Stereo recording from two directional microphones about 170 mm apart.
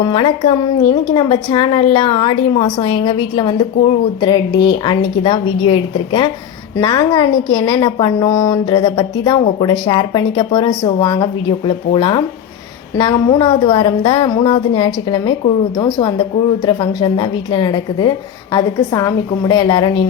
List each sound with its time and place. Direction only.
0.0 s a woman's voice: 30° left (ahead or behind)